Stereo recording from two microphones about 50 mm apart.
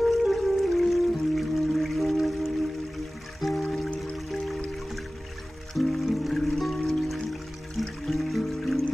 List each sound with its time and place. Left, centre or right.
0.2 s music: centre
5.8 s music: centre